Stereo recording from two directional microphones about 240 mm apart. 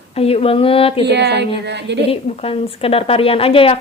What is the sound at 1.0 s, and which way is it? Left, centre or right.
A woman's voice, right.